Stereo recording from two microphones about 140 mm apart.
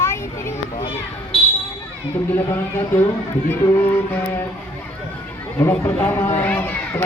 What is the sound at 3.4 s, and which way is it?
Speech, 15° left (ahead or behind).